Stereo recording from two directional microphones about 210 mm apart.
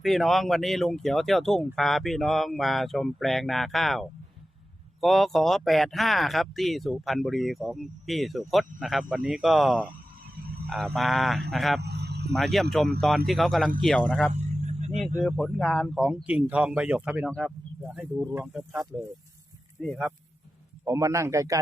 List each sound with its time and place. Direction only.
0.0 s speech: centre (ahead or behind)
11.8 s a sound: 50° right (ahead or behind)
12.3 s speech: centre (ahead or behind)
14.3 s vehicle: 30° right (ahead or behind)
15.2 s a man's voice: centre (ahead or behind)
20.8 s a man's voice: 15° right (ahead or behind)